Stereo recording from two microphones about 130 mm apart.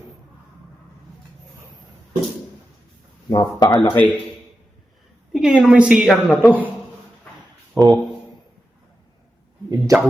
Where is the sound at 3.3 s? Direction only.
35° left (ahead or behind).